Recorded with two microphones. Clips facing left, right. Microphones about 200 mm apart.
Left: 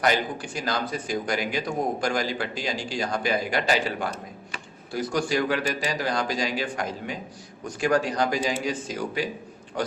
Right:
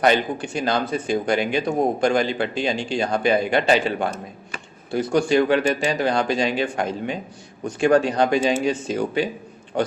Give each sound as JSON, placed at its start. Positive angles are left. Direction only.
{"t": 0.0, "sound": "a man's voice", "side_deg": -25}